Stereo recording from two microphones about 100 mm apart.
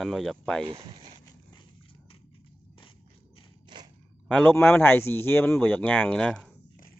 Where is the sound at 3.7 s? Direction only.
50° right (ahead or behind).